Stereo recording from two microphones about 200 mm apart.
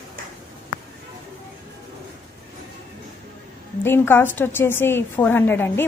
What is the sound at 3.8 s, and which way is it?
A woman's voice, 10° left (ahead or behind).